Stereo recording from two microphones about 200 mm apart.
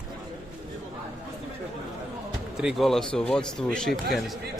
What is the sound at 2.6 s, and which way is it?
Speech, centre (ahead or behind).